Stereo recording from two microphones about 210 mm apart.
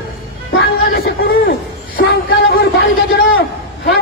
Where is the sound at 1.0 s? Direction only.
45° left (ahead or behind).